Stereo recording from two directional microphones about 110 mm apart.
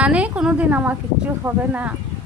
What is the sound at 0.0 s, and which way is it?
Speech, 10° right (ahead or behind).